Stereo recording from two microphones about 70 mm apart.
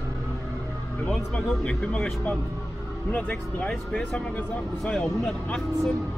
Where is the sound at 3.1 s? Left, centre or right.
Left.